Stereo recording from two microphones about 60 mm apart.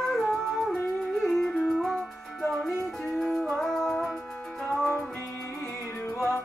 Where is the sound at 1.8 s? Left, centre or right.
Centre.